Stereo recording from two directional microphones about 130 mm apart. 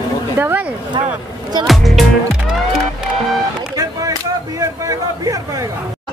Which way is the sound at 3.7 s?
25° right (ahead or behind).